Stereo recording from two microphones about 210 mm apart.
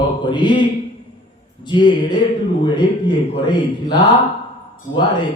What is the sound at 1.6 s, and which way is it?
Speech, 20° left (ahead or behind).